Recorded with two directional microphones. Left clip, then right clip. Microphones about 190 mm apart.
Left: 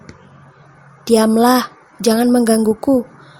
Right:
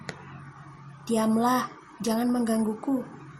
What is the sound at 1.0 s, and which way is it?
A woman's voice, 45° left (ahead or behind).